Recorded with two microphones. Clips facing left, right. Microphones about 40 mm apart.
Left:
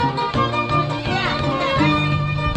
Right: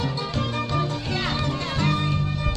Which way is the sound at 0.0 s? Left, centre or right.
Left.